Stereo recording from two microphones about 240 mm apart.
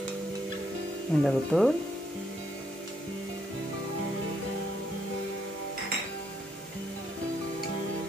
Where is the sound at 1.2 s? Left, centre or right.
Centre.